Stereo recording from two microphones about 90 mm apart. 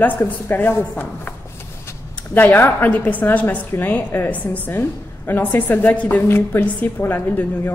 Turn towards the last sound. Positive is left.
turn(degrees=25)  # may be behind; listen again after turning